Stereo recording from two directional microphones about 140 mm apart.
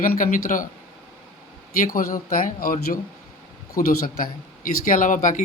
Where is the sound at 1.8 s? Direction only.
85° left.